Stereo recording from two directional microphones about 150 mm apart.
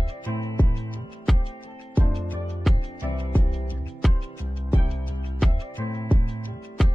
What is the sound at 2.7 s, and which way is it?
Music, centre (ahead or behind).